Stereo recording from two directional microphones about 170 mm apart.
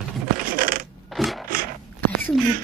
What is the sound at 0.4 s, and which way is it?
Coin, 55° right (ahead or behind).